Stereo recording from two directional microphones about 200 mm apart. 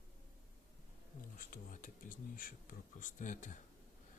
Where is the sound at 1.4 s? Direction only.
40° left (ahead or behind).